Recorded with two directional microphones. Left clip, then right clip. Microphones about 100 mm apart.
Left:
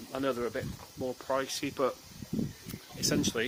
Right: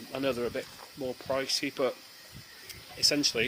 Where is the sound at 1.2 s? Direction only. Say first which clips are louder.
Right 2 dB; 5° right (ahead or behind).